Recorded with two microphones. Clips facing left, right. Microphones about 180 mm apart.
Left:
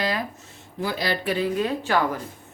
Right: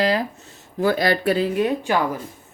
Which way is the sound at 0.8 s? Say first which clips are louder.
Right 7 dB; 50° right (ahead or behind).